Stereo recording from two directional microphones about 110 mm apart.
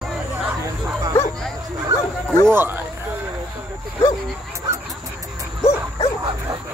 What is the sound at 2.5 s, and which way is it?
Speech, 20° right (ahead or behind).